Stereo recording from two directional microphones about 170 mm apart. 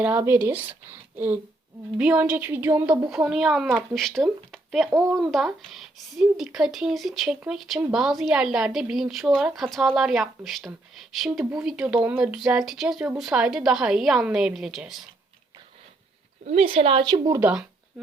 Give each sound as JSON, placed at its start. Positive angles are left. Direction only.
{"t": 0.0, "sound": "speech", "side_deg": -10}
{"t": 16.5, "sound": "a woman's voice", "side_deg": -35}
{"t": 17.4, "sound": "speech", "side_deg": -5}